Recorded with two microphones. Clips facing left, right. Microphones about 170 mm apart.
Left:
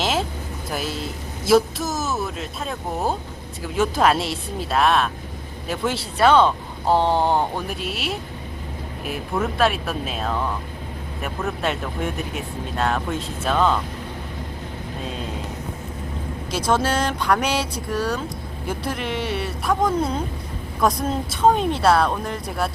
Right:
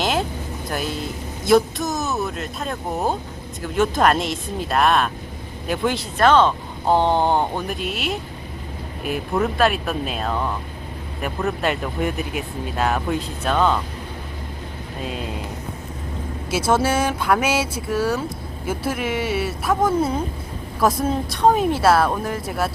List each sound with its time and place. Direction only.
0.0 s vehicle: centre (ahead or behind)
0.7 s speech: 5° left (ahead or behind)
15.0 s speech: 5° right (ahead or behind)
16.5 s speech: 5° right (ahead or behind)